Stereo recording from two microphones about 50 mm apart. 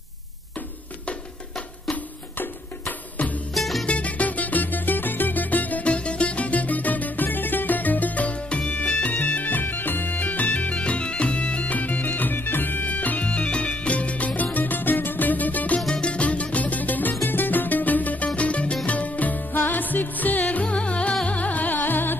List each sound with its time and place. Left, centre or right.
3.5 s music: centre
3.8 s music: left
9.1 s bagpipes: left
15.9 s music: left